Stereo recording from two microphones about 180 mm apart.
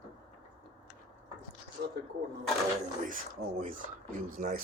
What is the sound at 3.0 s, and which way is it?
Speech, 45° right (ahead or behind).